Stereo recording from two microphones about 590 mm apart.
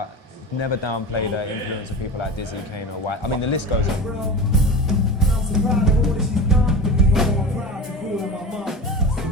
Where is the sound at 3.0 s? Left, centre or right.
Left.